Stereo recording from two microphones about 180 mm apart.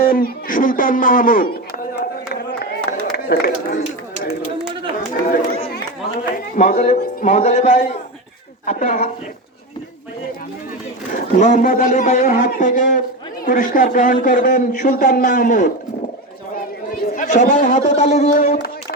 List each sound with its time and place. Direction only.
0.0 s speech: 55° left (ahead or behind)
2.9 s a sound: 55° left (ahead or behind)
3.2 s a man's voice: 60° left (ahead or behind)
5.2 s a man's voice: 50° left (ahead or behind)
11.1 s speech: 45° left (ahead or behind)
17.1 s speech: 45° left (ahead or behind)
18.3 s a sound: 55° left (ahead or behind)